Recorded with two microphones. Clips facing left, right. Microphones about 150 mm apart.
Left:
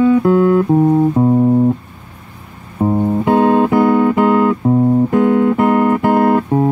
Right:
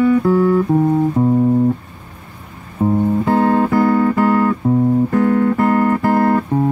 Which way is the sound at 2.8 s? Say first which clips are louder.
Left 1 dB; 25° left (ahead or behind).